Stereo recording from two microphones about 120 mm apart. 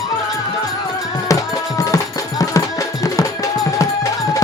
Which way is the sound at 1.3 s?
30° left (ahead or behind).